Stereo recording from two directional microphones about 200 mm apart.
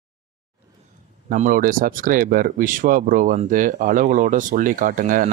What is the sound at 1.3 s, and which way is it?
Speech, 45° right (ahead or behind).